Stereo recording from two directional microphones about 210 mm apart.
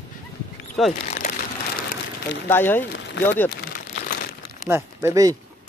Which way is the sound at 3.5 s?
50° left (ahead or behind).